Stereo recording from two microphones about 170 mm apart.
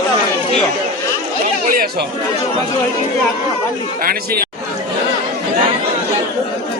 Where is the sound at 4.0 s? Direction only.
55° right (ahead or behind).